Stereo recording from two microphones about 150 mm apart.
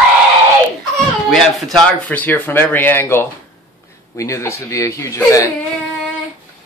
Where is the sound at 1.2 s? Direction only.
Centre (ahead or behind).